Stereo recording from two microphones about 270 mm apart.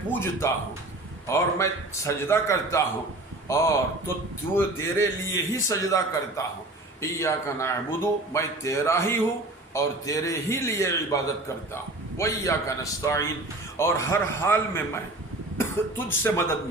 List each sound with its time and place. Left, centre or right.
0.1 s a man's voice: centre